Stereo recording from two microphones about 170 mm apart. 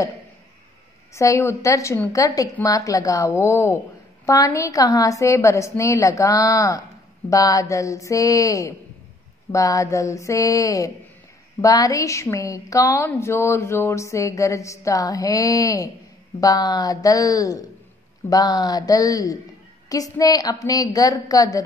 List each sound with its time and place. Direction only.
1.1 s a woman's voice: 15° left (ahead or behind)